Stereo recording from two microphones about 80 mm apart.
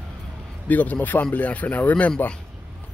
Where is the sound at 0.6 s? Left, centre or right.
Left.